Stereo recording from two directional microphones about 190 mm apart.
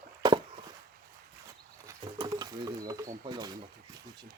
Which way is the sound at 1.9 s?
20° right (ahead or behind).